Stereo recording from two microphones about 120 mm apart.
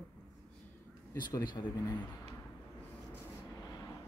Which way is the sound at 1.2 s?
35° left (ahead or behind).